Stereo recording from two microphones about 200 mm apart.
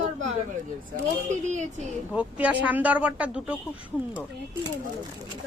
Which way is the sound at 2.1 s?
5° right (ahead or behind).